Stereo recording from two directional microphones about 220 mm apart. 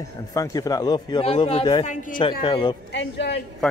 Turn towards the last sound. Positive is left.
turn(degrees=55)  # may be behind; listen again after turning